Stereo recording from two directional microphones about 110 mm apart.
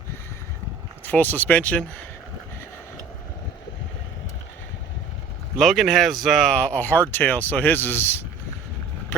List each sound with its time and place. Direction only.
1.0 s speech: 15° left (ahead or behind)
5.5 s speech: centre (ahead or behind); by 8.2 s 20° left (ahead or behind)